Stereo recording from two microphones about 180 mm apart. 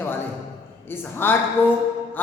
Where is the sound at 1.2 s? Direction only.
10° left (ahead or behind).